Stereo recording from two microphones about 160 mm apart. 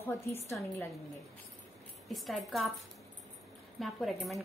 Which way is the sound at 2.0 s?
Centre (ahead or behind).